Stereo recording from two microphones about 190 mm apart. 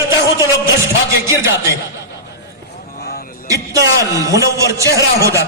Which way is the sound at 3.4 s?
15° right (ahead or behind).